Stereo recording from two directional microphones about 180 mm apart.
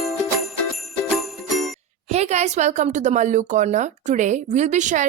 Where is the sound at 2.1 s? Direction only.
35° right (ahead or behind).